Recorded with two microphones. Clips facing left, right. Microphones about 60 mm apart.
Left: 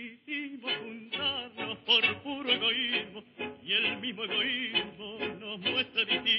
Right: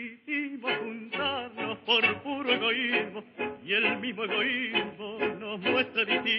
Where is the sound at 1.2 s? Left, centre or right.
Right.